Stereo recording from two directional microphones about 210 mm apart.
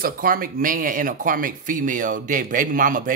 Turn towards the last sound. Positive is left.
turn(degrees=-40)  # may be behind; listen again after turning